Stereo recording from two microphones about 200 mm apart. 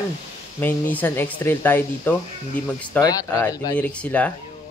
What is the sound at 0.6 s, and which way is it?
Speech, 10° left (ahead or behind).